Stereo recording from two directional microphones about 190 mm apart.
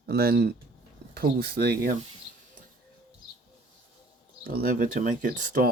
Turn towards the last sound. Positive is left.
turn(degrees=-45)  # may be behind; listen again after turning